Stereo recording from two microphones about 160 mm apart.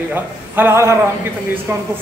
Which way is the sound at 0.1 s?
15° right (ahead or behind).